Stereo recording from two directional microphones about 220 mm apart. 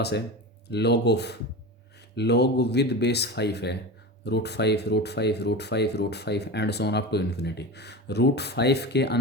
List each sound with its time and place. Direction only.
0.7 s speech: 50° left (ahead or behind)